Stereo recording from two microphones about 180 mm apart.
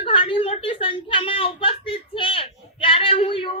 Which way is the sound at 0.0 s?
30° left (ahead or behind).